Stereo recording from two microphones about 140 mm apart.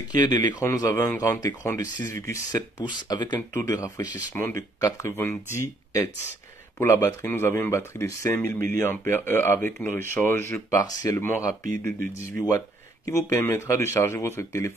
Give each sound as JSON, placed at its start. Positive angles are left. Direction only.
{"t": 0.1, "sound": "speech", "side_deg": 30}
{"t": 0.7, "sound": "speech", "side_deg": 20}
{"t": 3.3, "sound": "speech", "side_deg": 20}